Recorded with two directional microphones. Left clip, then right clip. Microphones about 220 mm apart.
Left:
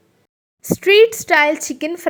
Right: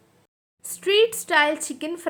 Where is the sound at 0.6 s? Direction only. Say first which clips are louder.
Left 8 dB; 25° left (ahead or behind).